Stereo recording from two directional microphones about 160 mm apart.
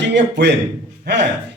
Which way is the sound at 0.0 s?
90° right.